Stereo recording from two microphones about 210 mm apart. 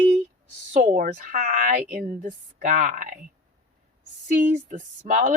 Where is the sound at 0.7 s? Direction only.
35° right (ahead or behind).